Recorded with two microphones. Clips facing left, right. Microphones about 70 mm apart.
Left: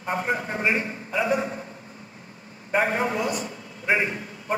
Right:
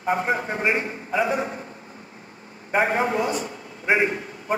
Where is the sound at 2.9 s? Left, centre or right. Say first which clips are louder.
Right 2 dB; right.